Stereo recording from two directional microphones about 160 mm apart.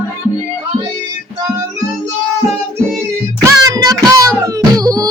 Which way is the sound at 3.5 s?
20° right (ahead or behind).